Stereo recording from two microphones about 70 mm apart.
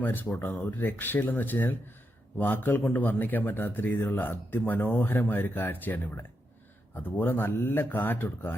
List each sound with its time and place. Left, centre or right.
0.0 s a man's voice: left